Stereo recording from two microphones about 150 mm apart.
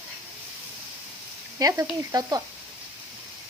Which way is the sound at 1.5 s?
25° right (ahead or behind).